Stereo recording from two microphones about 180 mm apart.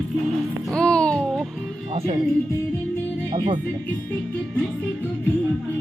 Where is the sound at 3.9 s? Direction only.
5° left (ahead or behind).